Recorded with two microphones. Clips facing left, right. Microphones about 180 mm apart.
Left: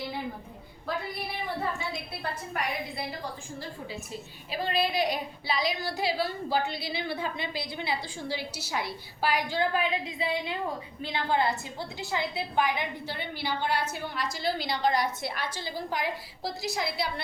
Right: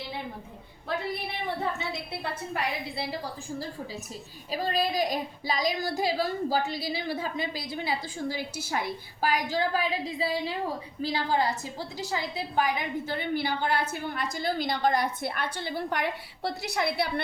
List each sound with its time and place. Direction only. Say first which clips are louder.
4.5 s a woman's voice: right 1 dB; 40° right (ahead or behind); by 17.2 s 60° right (ahead or behind)